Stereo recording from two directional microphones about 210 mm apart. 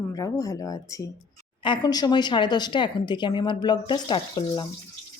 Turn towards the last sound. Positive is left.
turn(degrees=20)  # may be behind; listen again after turning